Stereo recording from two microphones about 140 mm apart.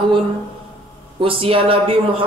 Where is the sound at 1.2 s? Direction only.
40° right (ahead or behind).